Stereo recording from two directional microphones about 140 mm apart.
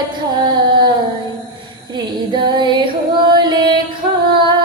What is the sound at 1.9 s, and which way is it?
Female singing, 30° right (ahead or behind).